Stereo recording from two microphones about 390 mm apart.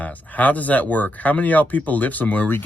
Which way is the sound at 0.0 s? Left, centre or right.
Centre.